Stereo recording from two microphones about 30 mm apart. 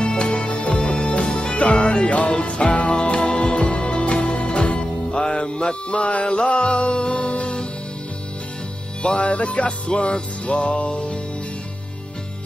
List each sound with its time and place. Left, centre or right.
0.0 s music: left
5.9 s music: left
6.2 s music: left
9.0 s music: left
9.3 s music: left